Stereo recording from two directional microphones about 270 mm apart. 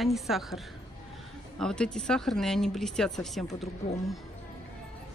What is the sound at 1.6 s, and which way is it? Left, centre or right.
Speech, centre.